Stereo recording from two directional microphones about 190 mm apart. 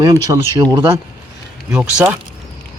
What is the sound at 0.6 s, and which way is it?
Speech, 15° right (ahead or behind).